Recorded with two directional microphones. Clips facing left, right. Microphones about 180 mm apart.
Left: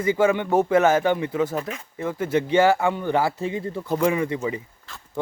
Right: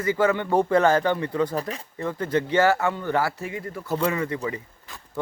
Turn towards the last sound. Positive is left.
turn(degrees=-15)  # may be behind; listen again after turning